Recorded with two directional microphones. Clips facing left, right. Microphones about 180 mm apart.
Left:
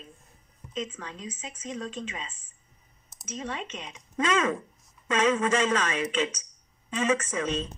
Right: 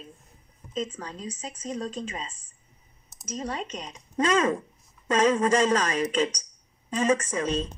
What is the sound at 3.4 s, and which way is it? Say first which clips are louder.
Speech: right 3 dB; 40° right (ahead or behind).